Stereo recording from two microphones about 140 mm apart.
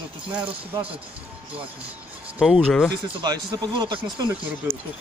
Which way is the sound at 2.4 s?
Centre (ahead or behind).